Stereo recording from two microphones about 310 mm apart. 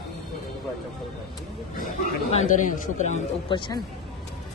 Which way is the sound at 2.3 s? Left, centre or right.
Left.